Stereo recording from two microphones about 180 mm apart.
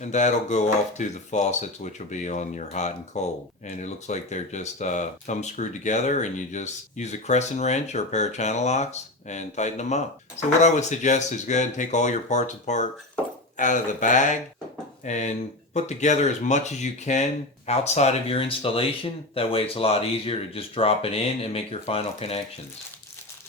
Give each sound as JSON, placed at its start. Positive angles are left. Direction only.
{"t": 0.0, "sound": "speech", "side_deg": 40}